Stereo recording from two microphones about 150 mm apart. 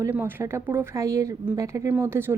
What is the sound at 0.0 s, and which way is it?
A woman's voice, 15° right (ahead or behind).